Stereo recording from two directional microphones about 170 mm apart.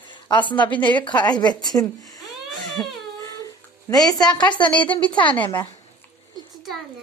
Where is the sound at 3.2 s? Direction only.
20° left (ahead or behind).